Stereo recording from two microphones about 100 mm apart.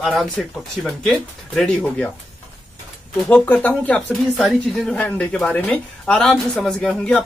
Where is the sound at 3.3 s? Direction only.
15° left (ahead or behind).